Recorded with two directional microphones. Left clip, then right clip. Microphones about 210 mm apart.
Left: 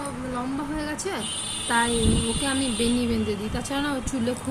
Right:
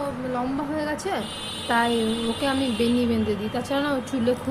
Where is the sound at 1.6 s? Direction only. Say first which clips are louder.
Right 1 dB; 15° left (ahead or behind).